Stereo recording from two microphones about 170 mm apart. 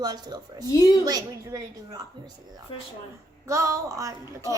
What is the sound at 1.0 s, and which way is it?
A woman's voice, 20° right (ahead or behind).